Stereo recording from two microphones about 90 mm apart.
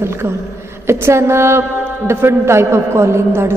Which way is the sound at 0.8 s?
30° right (ahead or behind).